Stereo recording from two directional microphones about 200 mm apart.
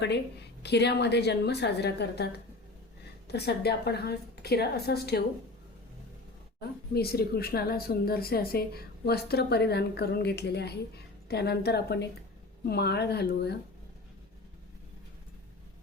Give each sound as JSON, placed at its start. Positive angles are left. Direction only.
{"t": 0.6, "sound": "a woman's voice", "side_deg": 55}
{"t": 6.6, "sound": "speech", "side_deg": 50}